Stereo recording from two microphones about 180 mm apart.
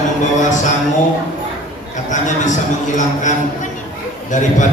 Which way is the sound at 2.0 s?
45° left (ahead or behind).